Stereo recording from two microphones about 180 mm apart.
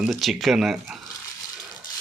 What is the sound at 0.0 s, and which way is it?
Speech, centre (ahead or behind).